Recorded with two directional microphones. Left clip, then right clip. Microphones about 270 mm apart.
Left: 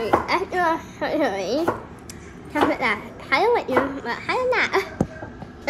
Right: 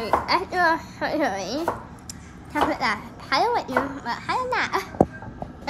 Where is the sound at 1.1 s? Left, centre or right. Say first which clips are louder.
Left 3 dB; right.